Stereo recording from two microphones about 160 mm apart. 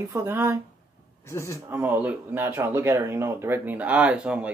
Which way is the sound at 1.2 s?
15° left (ahead or behind).